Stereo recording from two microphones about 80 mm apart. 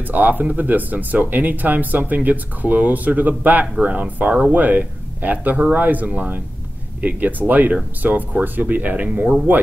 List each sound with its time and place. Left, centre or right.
0.0 s speech: right